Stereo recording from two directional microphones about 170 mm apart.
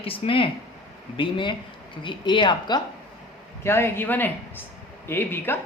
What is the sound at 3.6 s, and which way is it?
Speech, 15° left (ahead or behind).